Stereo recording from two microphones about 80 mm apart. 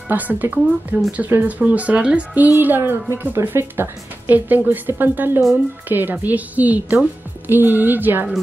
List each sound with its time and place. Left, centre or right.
0.1 s speech: right